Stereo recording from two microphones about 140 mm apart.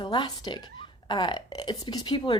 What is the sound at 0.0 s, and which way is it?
Speech, 30° left (ahead or behind).